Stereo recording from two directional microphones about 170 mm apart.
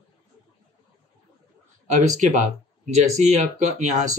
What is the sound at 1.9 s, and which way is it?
Speech, 45° right (ahead or behind).